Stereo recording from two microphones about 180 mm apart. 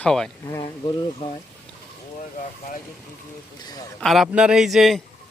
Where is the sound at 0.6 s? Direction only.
25° left (ahead or behind).